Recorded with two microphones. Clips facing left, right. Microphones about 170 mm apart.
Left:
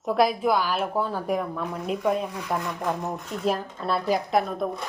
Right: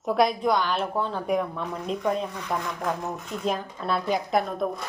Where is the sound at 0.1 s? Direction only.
Centre (ahead or behind).